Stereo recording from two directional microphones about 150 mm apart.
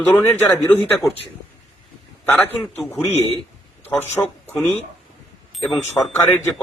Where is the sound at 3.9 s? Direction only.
15° left (ahead or behind).